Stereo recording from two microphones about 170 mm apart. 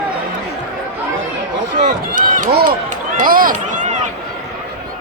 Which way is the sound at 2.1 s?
50° right (ahead or behind).